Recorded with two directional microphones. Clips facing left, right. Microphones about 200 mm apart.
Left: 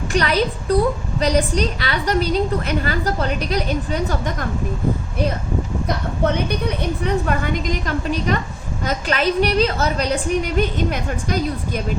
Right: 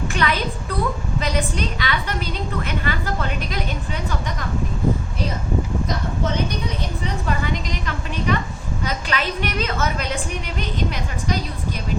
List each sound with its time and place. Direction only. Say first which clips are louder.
0.1 s a woman's voice: left 7 dB; 40° left (ahead or behind)
6.2 s a woman's voice: left 6 dB; 60° left (ahead or behind)